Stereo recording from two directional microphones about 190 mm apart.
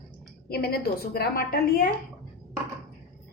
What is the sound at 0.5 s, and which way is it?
A woman's voice, 55° left (ahead or behind).